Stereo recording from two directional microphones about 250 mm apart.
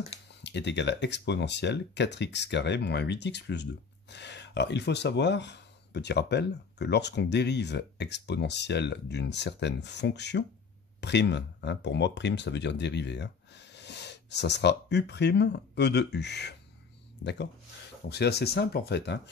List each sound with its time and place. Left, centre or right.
0.4 s speech: left